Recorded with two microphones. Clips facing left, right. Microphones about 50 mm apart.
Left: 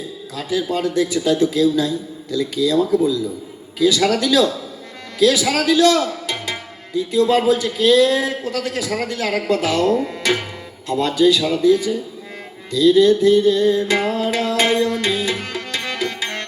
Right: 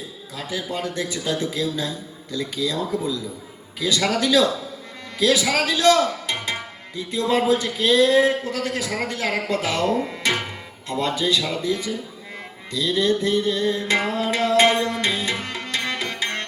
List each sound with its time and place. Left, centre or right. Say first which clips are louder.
0.8 s speech: left 8 dB; right
10.8 s speech: left 7 dB; right
14.1 s tabla: left 1 dB; right